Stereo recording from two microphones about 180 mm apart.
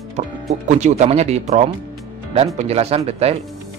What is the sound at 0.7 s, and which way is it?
Speech, 40° right (ahead or behind).